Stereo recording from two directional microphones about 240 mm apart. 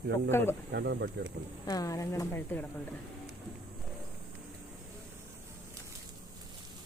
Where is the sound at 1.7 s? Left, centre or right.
Centre.